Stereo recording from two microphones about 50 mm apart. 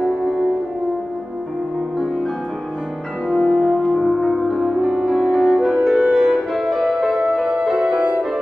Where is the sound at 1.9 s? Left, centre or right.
Centre.